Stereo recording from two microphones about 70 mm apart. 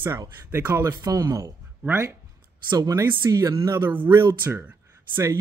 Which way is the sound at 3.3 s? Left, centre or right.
Right.